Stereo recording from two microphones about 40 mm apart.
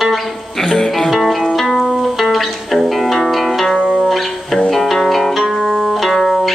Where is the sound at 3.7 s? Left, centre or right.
Right.